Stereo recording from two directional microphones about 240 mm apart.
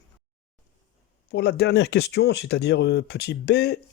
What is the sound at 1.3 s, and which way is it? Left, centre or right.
Speech, left.